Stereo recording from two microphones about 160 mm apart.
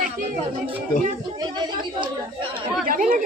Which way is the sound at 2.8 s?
60° right (ahead or behind).